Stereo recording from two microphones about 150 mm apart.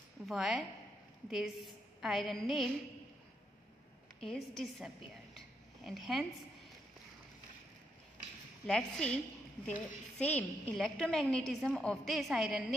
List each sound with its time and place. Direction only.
0.3 s a woman's voice: centre (ahead or behind)
4.2 s a woman's voice: 5° left (ahead or behind)
8.6 s a woman's voice: 5° left (ahead or behind)